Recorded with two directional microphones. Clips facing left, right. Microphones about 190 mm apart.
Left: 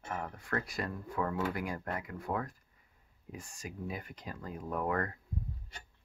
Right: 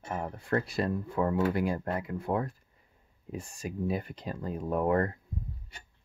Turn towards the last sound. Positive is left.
turn(degrees=-30)  # may be behind; listen again after turning